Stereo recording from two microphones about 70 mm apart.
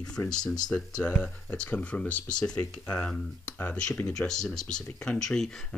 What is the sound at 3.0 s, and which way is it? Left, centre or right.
Speech, left.